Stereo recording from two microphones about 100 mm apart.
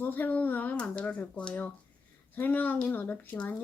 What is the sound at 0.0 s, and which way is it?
Speech, 20° left (ahead or behind).